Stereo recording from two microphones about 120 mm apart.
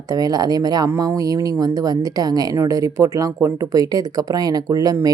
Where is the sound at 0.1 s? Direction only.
30° right (ahead or behind).